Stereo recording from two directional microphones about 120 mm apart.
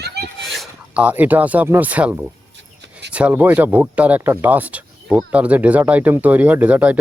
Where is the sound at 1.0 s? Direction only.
15° right (ahead or behind).